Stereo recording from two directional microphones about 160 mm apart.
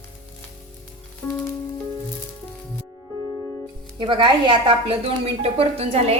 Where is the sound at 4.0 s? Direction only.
30° right (ahead or behind).